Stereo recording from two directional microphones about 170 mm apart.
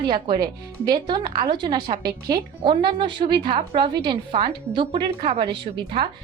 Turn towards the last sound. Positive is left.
turn(degrees=-30)  # may be behind; listen again after turning